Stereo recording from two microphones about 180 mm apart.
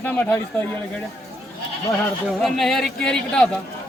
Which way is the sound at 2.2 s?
Centre (ahead or behind).